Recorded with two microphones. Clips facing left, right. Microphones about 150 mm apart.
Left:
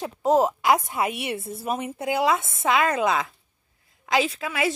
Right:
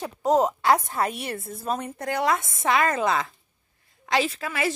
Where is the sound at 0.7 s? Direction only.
Centre (ahead or behind).